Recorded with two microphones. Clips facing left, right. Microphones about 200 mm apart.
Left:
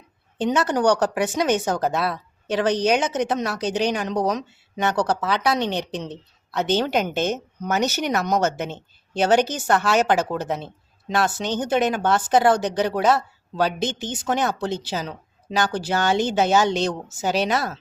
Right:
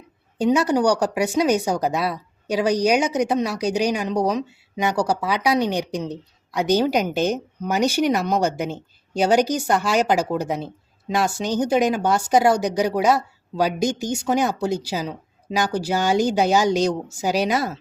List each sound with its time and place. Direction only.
0.3 s speech: 10° right (ahead or behind)